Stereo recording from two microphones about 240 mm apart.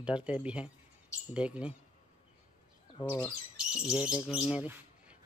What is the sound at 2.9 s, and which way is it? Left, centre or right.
Speech, centre.